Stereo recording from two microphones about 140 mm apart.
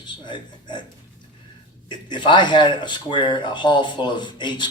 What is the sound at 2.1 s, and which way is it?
Speech, 35° left (ahead or behind).